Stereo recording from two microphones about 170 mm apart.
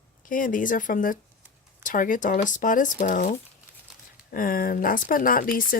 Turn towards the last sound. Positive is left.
turn(degrees=55)  # may be behind; listen again after turning